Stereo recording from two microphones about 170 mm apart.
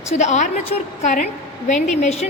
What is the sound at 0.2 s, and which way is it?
A woman's voice, 45° left (ahead or behind).